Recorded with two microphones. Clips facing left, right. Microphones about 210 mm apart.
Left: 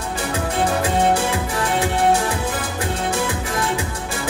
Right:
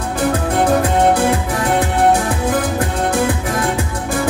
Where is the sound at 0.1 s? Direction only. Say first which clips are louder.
Right 7 dB; 55° right (ahead or behind).